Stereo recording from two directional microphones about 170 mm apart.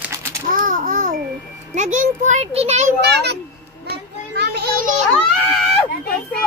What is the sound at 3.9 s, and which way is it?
Children playing, 75° right (ahead or behind).